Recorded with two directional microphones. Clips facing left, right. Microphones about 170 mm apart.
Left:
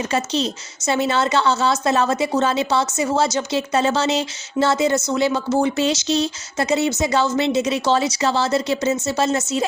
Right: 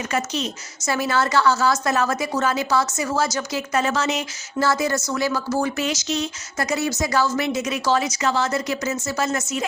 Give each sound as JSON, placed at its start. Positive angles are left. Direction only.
{"t": 0.1, "sound": "speech", "side_deg": 30}